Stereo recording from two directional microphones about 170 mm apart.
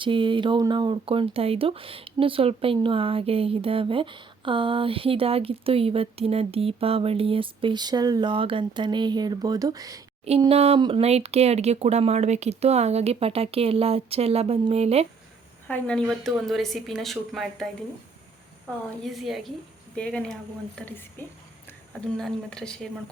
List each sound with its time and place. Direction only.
0.0 s speech: 30° right (ahead or behind)
10.2 s speech: 35° right (ahead or behind)
15.6 s speech: 5° left (ahead or behind)
19.0 s a woman's voice: centre (ahead or behind)